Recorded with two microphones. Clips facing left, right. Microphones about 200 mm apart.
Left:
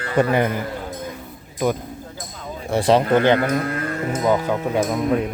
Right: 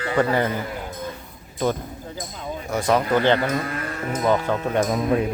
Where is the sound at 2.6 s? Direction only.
30° left (ahead or behind).